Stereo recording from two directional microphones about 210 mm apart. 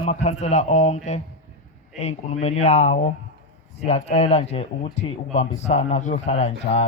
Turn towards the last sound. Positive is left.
turn(degrees=30)  # may be behind; listen again after turning